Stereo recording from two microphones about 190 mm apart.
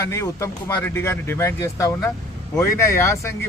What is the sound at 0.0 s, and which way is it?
A man's voice, 15° left (ahead or behind).